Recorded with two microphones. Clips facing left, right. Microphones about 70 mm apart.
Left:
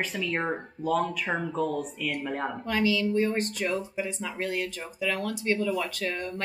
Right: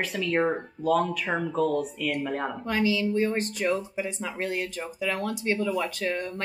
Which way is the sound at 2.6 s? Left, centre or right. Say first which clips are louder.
Even; right.